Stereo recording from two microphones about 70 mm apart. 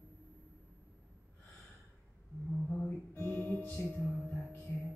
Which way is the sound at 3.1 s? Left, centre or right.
Left.